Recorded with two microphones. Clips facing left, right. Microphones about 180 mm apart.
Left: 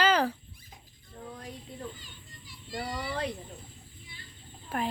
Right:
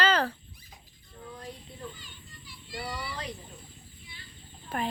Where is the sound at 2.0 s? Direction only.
45° left (ahead or behind).